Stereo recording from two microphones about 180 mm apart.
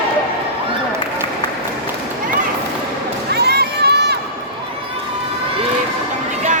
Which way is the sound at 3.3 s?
65° right (ahead or behind).